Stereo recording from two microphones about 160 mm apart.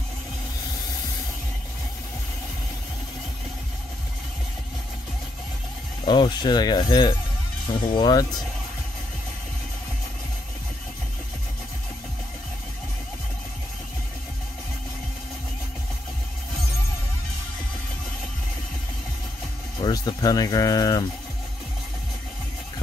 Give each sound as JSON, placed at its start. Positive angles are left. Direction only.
{"t": 6.0, "sound": "speech", "side_deg": 30}
{"t": 19.8, "sound": "speech", "side_deg": 25}